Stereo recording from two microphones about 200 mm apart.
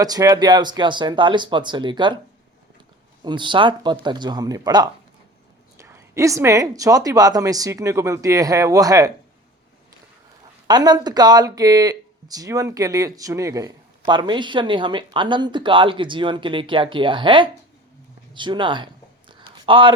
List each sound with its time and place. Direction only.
0.0 s speech: 20° right (ahead or behind)
3.2 s a woman's voice: 25° right (ahead or behind)
10.7 s speech: 20° right (ahead or behind)
19.3 s a sound: 25° right (ahead or behind)